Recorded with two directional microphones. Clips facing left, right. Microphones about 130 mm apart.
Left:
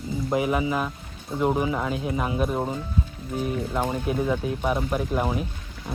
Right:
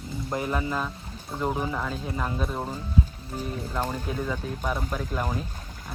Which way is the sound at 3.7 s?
10° left (ahead or behind).